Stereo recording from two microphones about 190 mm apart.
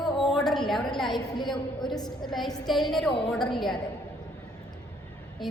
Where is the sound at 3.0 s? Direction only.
30° left (ahead or behind).